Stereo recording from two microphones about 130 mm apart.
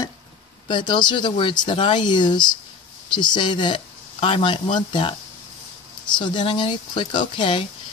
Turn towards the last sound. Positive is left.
turn(degrees=40)  # may be behind; listen again after turning